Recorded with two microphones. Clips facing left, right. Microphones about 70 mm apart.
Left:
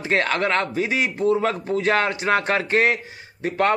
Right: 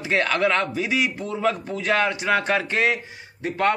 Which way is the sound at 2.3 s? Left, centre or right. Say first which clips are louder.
Left 1 dB; left.